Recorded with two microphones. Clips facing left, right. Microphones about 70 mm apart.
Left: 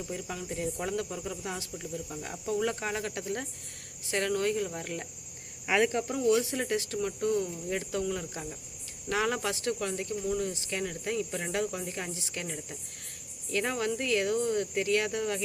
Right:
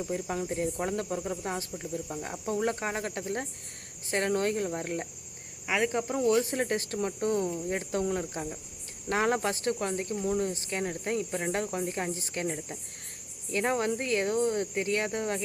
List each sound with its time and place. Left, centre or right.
0.0 s speech: right
2.6 s speech: right